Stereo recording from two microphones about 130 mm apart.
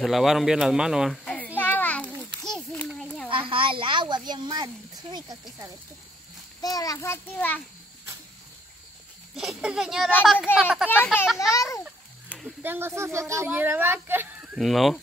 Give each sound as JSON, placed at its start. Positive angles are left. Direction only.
{"t": 0.0, "sound": "speech", "side_deg": 0}
{"t": 1.6, "sound": "children playing", "side_deg": 15}
{"t": 3.3, "sound": "a child's voice", "side_deg": -45}
{"t": 6.6, "sound": "a child's voice", "side_deg": 30}
{"t": 9.3, "sound": "a child's voice", "side_deg": -5}
{"t": 11.3, "sound": "a child's voice", "side_deg": 25}
{"t": 12.3, "sound": "a sound", "side_deg": 5}
{"t": 12.6, "sound": "speech", "side_deg": -15}
{"t": 14.6, "sound": "a child's voice", "side_deg": 0}